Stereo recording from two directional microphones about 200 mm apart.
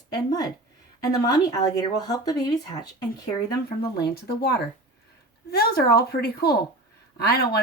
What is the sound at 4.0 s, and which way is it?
Speech, 50° left (ahead or behind).